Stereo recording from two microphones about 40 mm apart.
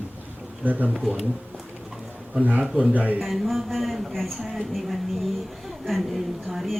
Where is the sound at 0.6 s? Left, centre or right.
Right.